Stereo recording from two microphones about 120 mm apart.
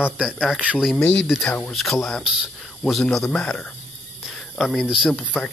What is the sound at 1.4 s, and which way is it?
Speech, 10° left (ahead or behind).